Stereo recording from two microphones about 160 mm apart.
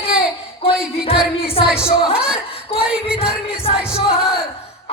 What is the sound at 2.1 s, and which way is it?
Speech, 5° right (ahead or behind).